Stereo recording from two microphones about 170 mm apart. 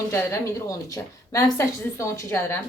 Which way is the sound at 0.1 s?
15° left (ahead or behind).